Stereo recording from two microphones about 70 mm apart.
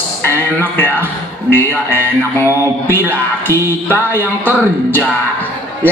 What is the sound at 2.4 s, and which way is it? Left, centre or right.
Mantra, left.